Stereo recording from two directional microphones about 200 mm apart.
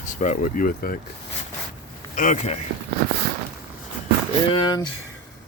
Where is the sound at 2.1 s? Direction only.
40° left (ahead or behind).